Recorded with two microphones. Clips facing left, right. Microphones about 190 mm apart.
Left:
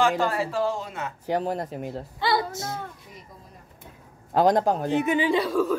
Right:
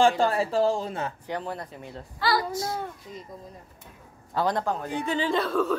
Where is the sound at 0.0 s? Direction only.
30° right (ahead or behind).